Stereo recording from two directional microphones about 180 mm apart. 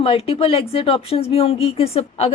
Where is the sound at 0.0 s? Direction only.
30° left (ahead or behind).